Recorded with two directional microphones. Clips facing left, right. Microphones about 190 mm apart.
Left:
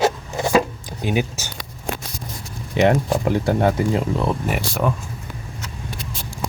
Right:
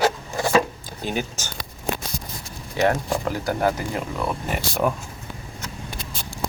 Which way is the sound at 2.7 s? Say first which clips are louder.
Left 4 dB; 25° left (ahead or behind).